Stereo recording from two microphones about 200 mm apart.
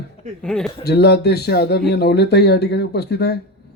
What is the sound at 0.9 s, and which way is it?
Speech, 55° left (ahead or behind).